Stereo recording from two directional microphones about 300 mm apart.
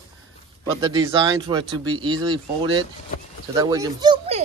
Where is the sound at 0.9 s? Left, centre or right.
Centre.